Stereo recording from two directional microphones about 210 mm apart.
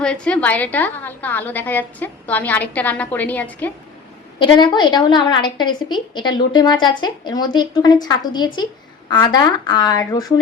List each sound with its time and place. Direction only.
0.0 s a woman's voice: 5° left (ahead or behind)
4.4 s a woman's voice: 20° left (ahead or behind)